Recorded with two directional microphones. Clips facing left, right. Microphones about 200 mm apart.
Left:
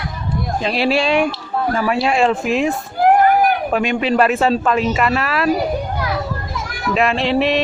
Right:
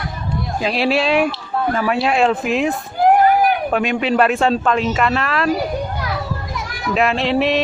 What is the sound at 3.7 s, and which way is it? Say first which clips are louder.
Speech: left 1 dB; centre (ahead or behind).